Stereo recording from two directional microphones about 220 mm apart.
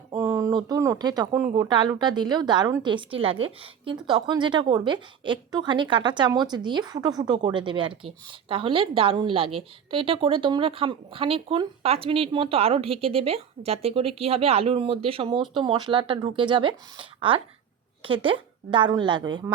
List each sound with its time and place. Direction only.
0.1 s speech: 15° right (ahead or behind)